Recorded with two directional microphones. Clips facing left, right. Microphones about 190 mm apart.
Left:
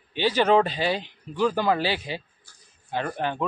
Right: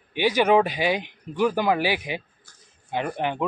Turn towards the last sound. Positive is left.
turn(degrees=-15)  # may be behind; listen again after turning